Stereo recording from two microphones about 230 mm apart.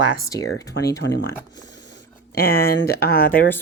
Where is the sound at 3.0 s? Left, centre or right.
Centre.